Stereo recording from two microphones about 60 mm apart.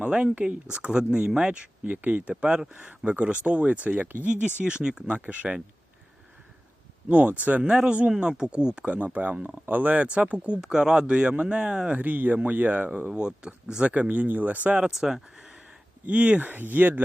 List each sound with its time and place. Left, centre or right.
0.0 s speech: centre
2.3 s speech: centre
7.1 s speech: right
7.7 s speech: centre
11.9 s speech: right
14.8 s speech: centre
16.0 s speech: right